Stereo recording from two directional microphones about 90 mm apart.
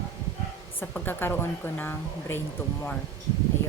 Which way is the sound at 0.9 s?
20° left (ahead or behind).